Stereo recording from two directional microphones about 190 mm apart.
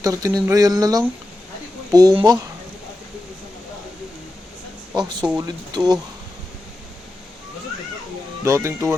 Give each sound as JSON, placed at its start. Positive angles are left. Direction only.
{"t": 0.0, "sound": "speech", "side_deg": -15}
{"t": 4.9, "sound": "speech", "side_deg": -20}
{"t": 8.4, "sound": "speech", "side_deg": -15}